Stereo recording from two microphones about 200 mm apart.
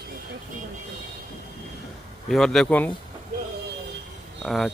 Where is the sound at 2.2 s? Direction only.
Centre (ahead or behind).